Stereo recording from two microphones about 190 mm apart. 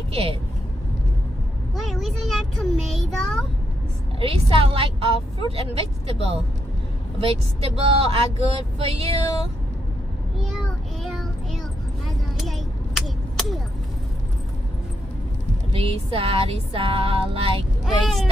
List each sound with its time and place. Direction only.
0.1 s speech: 30° right (ahead or behind)
1.8 s a child's voice: centre (ahead or behind)
4.2 s a woman's voice: 30° right (ahead or behind)
11.1 s child singing: centre (ahead or behind)
12.4 s a sound: centre (ahead or behind)
15.7 s a woman's voice: 30° right (ahead or behind)
17.8 s a child's voice: centre (ahead or behind)